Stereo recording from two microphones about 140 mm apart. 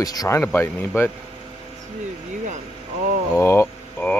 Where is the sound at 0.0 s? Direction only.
25° left (ahead or behind).